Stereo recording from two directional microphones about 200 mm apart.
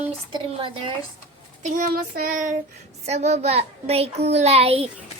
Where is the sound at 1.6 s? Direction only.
40° right (ahead or behind).